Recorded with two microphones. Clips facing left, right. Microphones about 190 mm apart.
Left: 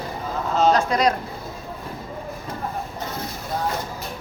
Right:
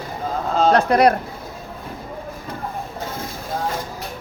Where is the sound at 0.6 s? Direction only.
60° right (ahead or behind).